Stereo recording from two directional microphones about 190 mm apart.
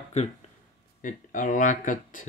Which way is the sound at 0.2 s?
35° left (ahead or behind).